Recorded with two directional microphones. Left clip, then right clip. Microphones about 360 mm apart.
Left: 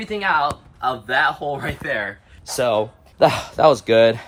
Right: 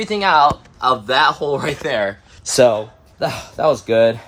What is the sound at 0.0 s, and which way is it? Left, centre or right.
Speech, centre.